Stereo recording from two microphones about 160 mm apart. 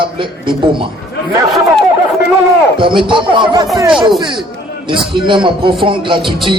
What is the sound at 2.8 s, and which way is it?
Speech, 30° right (ahead or behind).